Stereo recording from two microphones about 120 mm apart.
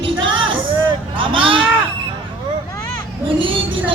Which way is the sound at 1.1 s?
45° right (ahead or behind).